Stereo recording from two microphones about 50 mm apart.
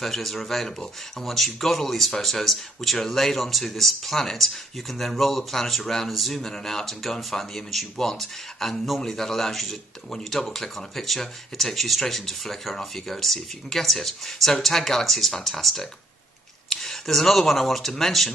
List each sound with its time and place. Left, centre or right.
0.0 s speech: centre